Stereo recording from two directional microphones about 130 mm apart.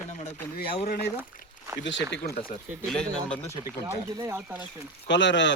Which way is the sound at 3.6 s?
25° right (ahead or behind).